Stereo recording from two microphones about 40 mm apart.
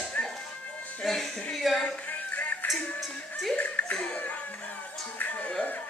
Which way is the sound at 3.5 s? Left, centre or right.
Left.